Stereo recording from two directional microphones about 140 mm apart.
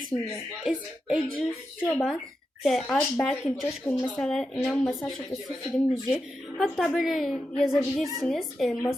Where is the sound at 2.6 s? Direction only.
Centre (ahead or behind).